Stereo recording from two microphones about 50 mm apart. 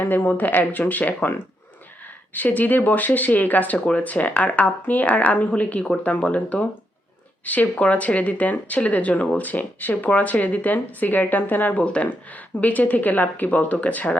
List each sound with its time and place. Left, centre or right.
0.0 s speech: left
2.3 s speech: left